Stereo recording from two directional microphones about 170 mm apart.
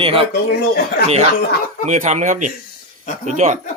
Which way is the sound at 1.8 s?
40° right (ahead or behind).